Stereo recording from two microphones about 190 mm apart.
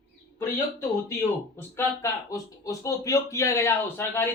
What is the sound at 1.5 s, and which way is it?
Speech, 15° left (ahead or behind).